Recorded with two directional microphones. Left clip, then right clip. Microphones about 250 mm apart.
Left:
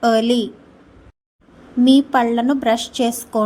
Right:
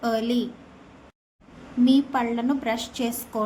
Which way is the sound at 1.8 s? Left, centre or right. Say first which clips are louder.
Left 7 dB; left.